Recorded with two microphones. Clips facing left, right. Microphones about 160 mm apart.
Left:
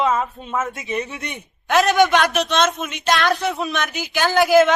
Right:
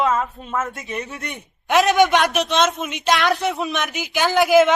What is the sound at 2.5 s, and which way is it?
Speech, 20° right (ahead or behind).